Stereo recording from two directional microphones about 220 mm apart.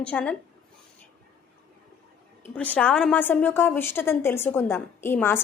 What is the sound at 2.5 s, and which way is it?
A woman's voice, 5° left (ahead or behind).